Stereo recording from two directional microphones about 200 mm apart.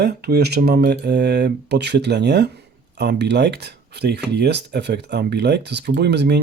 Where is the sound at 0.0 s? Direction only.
55° right (ahead or behind).